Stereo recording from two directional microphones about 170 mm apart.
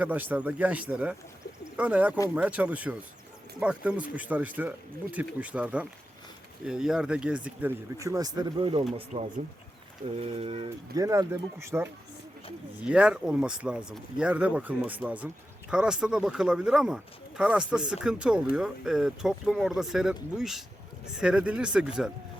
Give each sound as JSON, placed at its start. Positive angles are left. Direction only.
{"t": 0.0, "sound": "speech", "side_deg": -10}
{"t": 7.9, "sound": "speech", "side_deg": -20}
{"t": 10.9, "sound": "speech", "side_deg": -20}